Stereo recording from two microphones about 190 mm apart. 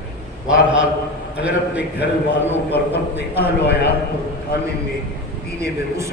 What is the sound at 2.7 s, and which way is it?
A man's voice, 60° left (ahead or behind).